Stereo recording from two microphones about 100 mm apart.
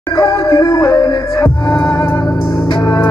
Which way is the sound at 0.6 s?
50° left (ahead or behind).